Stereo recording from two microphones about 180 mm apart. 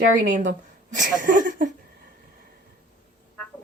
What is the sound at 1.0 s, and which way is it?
Speech, 45° right (ahead or behind).